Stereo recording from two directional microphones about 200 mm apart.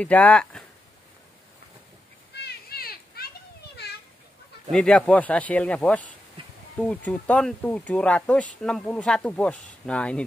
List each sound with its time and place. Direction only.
0.0 s speech: 5° left (ahead or behind)
2.4 s children playing: 50° left (ahead or behind)
4.7 s speech: 5° left (ahead or behind)
6.4 s insect: 25° right (ahead or behind)
6.8 s speech: 5° left (ahead or behind)